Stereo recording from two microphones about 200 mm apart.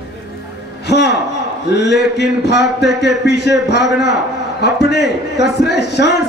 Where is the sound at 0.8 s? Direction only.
60° left (ahead or behind).